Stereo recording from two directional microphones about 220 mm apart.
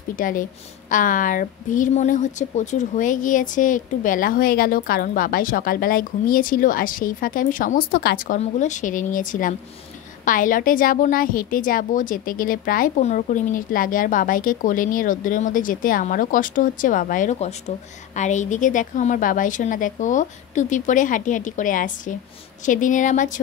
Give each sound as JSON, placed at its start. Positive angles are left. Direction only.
{"t": 0.1, "sound": "a woman's voice", "side_deg": 40}